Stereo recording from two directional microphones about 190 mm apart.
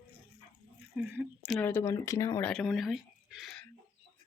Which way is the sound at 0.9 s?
5° right (ahead or behind).